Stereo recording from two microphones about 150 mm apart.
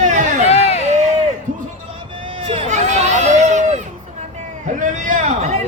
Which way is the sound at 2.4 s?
45° right (ahead or behind).